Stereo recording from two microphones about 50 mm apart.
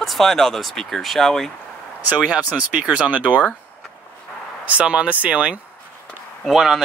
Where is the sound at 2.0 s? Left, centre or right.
Right.